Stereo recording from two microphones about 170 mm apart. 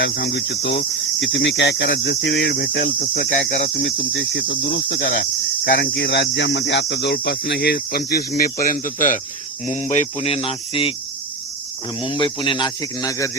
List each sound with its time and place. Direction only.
0.0 s cricket: 80° left; by 9.2 s 50° left (ahead or behind)
9.6 s speech: 45° left (ahead or behind)
11.9 s speech: 30° left (ahead or behind)